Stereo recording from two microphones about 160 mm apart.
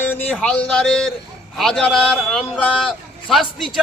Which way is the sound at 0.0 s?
10° left (ahead or behind).